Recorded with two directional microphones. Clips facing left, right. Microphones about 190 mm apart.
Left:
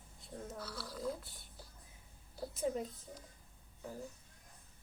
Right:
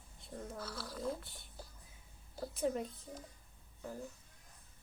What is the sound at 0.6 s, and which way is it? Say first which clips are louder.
Speech: right 1 dB; 45° right (ahead or behind).